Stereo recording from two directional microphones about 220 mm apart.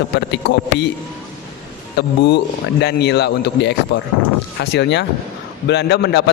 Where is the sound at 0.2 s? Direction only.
50° left (ahead or behind).